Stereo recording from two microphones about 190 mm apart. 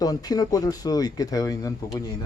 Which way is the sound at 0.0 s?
20° left (ahead or behind).